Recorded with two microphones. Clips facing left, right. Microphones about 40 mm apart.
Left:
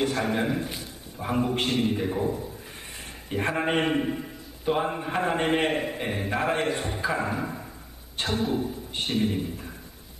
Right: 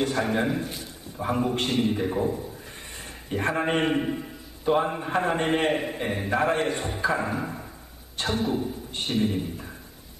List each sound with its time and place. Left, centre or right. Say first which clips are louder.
0.0 s a man's voice: right 1 dB; centre